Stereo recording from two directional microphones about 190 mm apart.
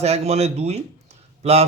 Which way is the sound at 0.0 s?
35° right (ahead or behind).